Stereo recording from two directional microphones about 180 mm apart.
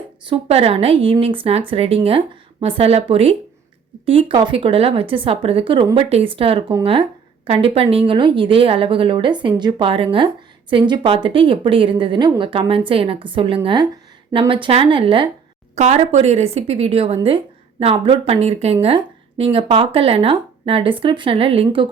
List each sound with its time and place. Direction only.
0.3 s a woman's voice: 30° right (ahead or behind)
15.7 s speech: 40° right (ahead or behind)